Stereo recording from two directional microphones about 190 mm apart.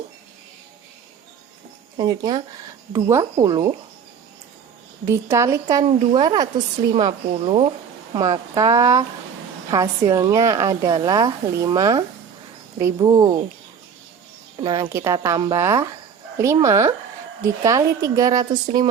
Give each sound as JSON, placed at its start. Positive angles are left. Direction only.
{"t": 2.0, "sound": "speech", "side_deg": -20}
{"t": 5.0, "sound": "a woman's voice", "side_deg": -15}
{"t": 14.6, "sound": "a woman's voice", "side_deg": -25}